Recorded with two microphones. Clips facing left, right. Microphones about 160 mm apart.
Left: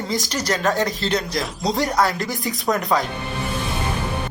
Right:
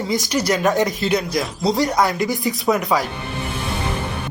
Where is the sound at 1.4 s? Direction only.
Centre (ahead or behind).